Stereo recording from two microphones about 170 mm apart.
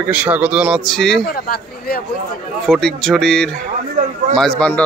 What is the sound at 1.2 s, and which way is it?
Speech, 60° left (ahead or behind).